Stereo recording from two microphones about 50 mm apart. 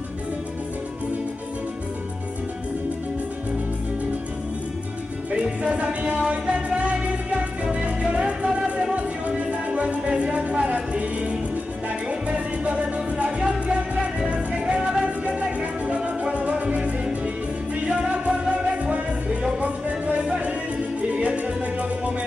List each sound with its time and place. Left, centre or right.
5.3 s music: right
20.2 s music: right